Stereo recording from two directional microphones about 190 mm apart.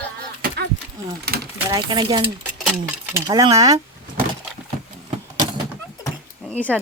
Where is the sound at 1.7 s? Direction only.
25° right (ahead or behind).